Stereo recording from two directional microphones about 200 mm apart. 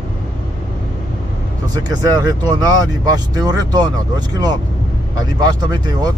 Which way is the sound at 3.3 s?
20° right (ahead or behind).